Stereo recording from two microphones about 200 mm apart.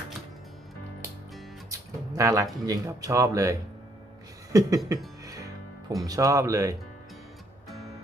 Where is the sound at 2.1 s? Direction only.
15° right (ahead or behind).